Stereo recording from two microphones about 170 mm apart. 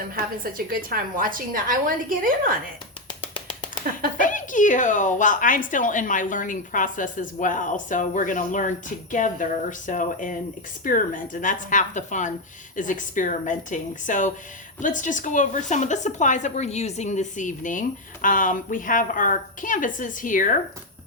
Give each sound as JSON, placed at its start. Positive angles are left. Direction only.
{"t": 0.4, "sound": "a woman's voice", "side_deg": -55}
{"t": 3.1, "sound": "a sound", "side_deg": 30}
{"t": 4.2, "sound": "a woman's voice", "side_deg": 50}